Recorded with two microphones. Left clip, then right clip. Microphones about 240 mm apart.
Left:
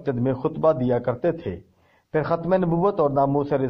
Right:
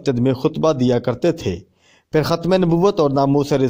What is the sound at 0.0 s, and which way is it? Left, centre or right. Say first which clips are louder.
A man's voice: right 6 dB; right.